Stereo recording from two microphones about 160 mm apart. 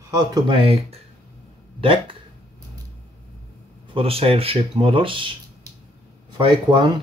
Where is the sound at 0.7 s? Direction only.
40° right (ahead or behind).